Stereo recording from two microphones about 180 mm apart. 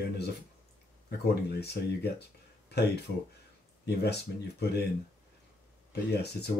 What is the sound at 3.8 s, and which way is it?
Speech, 65° left (ahead or behind).